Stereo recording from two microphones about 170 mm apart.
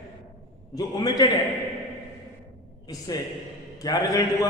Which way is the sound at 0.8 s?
20° left (ahead or behind).